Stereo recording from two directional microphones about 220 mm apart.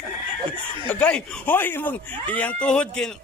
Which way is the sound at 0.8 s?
5° left (ahead or behind).